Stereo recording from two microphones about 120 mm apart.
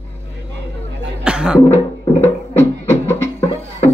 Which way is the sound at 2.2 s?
20° left (ahead or behind).